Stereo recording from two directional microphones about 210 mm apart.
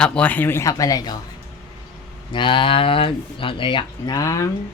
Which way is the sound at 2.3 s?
25° left (ahead or behind).